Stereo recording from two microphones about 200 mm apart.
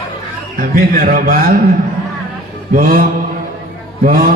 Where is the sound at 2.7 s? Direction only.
45° right (ahead or behind).